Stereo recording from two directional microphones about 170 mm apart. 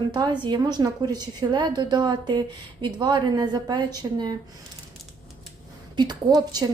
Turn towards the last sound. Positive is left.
turn(degrees=-25)  # may be behind; listen again after turning